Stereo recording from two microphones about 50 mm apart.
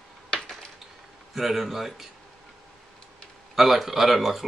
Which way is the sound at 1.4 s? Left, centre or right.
Centre.